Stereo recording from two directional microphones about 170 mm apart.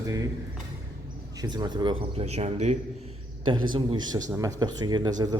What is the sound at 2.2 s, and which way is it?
Speech, 40° right (ahead or behind).